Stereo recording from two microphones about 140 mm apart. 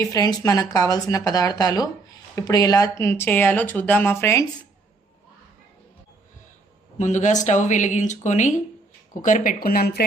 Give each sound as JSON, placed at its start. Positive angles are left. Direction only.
{"t": 0.0, "sound": "speech", "side_deg": 25}
{"t": 7.0, "sound": "speech", "side_deg": 55}
{"t": 9.2, "sound": "speech", "side_deg": 70}